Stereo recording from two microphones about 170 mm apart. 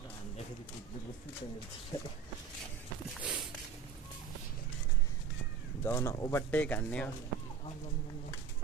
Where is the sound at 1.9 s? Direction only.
20° left (ahead or behind).